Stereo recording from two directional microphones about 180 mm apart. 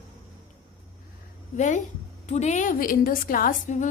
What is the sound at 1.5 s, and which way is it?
A woman's voice, 45° left (ahead or behind).